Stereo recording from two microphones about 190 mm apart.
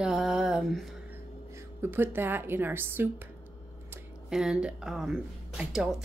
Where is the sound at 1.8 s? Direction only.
10° right (ahead or behind).